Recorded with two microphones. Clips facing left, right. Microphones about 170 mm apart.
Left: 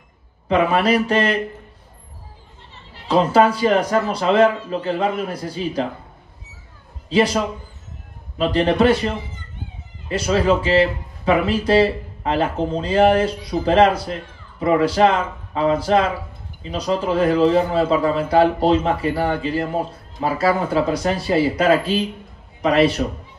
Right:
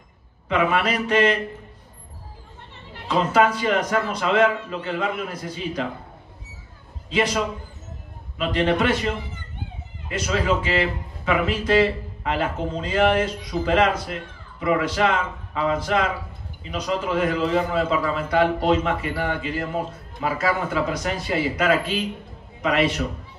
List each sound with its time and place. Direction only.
0.5 s a man's voice: 35° left (ahead or behind)
2.7 s a sound: 55° right (ahead or behind)
3.1 s a man's voice: 30° left (ahead or behind)
7.1 s a man's voice: 30° left (ahead or behind)